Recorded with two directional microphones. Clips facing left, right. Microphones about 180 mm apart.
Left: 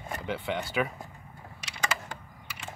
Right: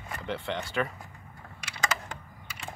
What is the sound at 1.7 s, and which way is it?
Computer keyboard, 10° left (ahead or behind).